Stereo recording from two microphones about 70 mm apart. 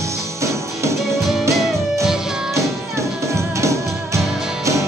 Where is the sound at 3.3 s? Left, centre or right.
Right.